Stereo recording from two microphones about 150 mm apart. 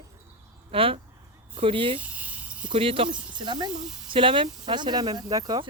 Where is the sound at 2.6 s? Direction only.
35° right (ahead or behind).